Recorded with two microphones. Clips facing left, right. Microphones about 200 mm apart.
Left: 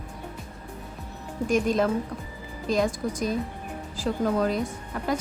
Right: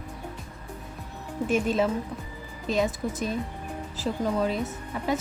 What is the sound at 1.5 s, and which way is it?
Speech, 5° right (ahead or behind).